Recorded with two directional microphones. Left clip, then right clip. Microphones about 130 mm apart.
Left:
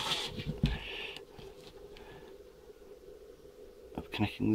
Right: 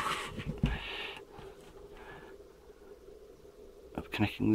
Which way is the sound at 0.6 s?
5° left (ahead or behind).